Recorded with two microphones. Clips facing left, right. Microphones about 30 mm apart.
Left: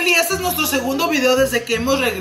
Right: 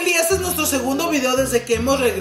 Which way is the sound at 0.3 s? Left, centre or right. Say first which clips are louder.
Right 1 dB; left.